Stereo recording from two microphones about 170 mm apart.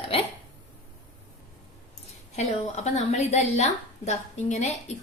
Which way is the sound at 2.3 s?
40° left (ahead or behind).